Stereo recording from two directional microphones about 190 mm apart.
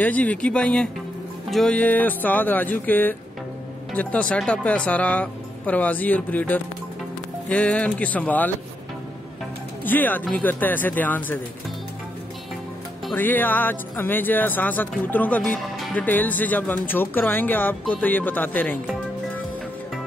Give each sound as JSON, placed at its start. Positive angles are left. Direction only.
{"t": 0.0, "sound": "speech", "side_deg": 10}
{"t": 9.8, "sound": "speech", "side_deg": 10}
{"t": 13.1, "sound": "speech", "side_deg": 10}